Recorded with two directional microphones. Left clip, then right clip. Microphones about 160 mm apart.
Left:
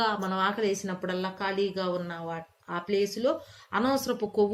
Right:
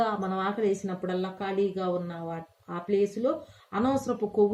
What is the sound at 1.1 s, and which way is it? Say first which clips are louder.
Speech: left 1 dB; 50° right (ahead or behind).